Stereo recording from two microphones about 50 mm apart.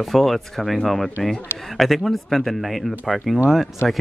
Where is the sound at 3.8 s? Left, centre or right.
Left.